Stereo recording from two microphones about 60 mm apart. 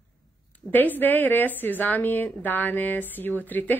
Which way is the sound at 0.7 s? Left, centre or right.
Left.